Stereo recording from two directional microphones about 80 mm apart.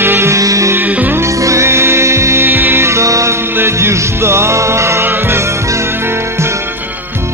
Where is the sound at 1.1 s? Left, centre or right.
Right.